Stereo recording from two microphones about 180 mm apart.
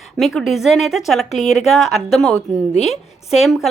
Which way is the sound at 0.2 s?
Centre (ahead or behind).